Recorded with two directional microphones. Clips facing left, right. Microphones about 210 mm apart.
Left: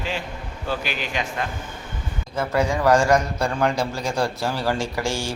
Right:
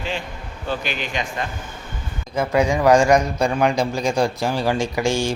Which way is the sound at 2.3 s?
15° right (ahead or behind).